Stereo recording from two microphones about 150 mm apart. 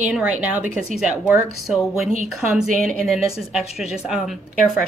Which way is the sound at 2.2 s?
Centre (ahead or behind).